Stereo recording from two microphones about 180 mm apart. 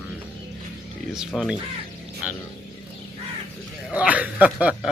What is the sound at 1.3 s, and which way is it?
Speech, centre (ahead or behind).